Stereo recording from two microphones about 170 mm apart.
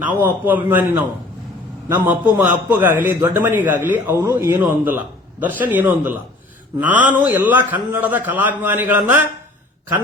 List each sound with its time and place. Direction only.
0.0 s a man's voice: 10° right (ahead or behind)
2.4 s a man's voice: 10° right (ahead or behind)
4.2 s speech: 25° right (ahead or behind)
4.4 s a man's voice: 10° right (ahead or behind)